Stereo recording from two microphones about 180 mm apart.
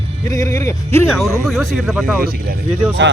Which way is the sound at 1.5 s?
Centre (ahead or behind).